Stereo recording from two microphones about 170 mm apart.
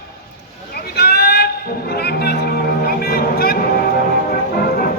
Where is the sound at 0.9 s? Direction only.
70° left (ahead or behind).